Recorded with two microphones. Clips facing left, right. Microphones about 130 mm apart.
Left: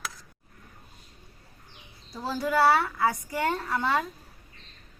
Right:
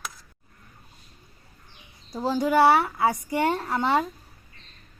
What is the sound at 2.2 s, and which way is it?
A woman's voice, 20° right (ahead or behind).